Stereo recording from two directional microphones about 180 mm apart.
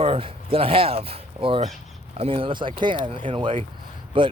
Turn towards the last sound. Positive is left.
turn(degrees=-30)  # may be behind; listen again after turning